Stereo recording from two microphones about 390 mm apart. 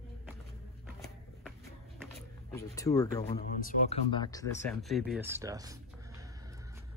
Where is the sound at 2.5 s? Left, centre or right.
Centre.